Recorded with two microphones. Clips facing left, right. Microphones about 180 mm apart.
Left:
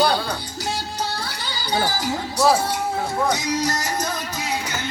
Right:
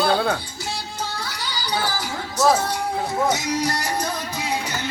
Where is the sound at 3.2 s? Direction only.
10° right (ahead or behind).